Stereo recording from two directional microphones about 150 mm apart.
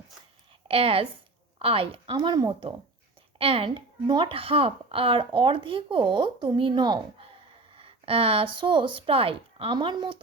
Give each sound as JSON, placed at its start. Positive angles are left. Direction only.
{"t": 0.7, "sound": "a woman's voice", "side_deg": -40}
{"t": 2.1, "sound": "speech", "side_deg": -25}